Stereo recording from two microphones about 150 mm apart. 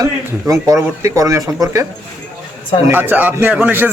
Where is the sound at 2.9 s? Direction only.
15° right (ahead or behind).